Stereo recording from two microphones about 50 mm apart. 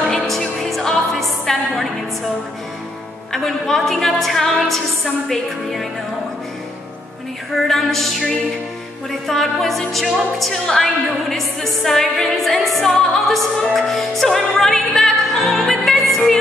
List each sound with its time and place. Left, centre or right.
0.3 s music: centre
3.3 s a woman's voice: centre
7.5 s music: centre
9.3 s a woman's voice: centre
13.7 s music: centre